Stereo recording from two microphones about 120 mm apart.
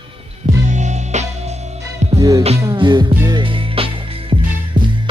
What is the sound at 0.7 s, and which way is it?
Music, 80° right.